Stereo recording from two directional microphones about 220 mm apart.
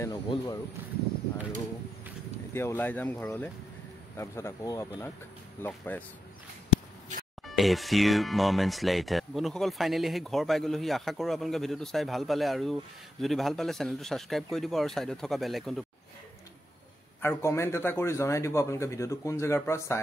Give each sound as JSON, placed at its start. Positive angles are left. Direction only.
{"t": 0.0, "sound": "a man's voice", "side_deg": 15}
{"t": 2.5, "sound": "a man's voice", "side_deg": 10}
{"t": 7.4, "sound": "speech", "side_deg": 0}
{"t": 17.2, "sound": "a man's voice", "side_deg": 10}